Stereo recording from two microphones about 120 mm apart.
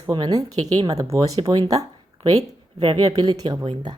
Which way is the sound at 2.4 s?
55° right (ahead or behind).